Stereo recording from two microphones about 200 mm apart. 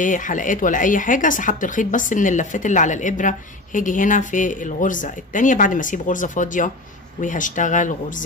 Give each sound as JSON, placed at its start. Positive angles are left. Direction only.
{"t": 0.0, "sound": "speech", "side_deg": 40}